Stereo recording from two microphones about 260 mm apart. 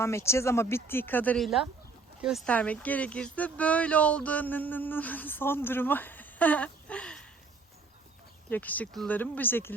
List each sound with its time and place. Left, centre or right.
0.0 s speech: centre
8.4 s speech: centre